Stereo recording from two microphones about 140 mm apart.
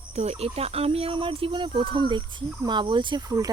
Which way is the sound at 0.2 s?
50° right (ahead or behind).